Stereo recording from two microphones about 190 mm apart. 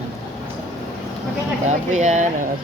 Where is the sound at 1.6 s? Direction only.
40° right (ahead or behind).